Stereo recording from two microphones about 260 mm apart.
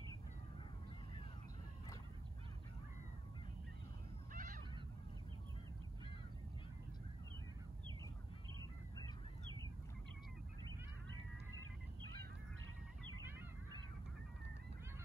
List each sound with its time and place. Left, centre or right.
4.3 s goose: right